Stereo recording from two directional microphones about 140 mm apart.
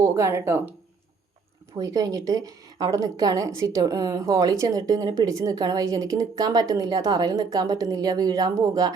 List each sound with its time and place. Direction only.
0.0 s speech: 20° right (ahead or behind)
1.8 s speech: 25° right (ahead or behind)